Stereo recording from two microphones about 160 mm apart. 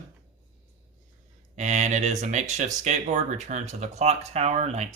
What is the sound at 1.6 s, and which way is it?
Speech, 50° right (ahead or behind).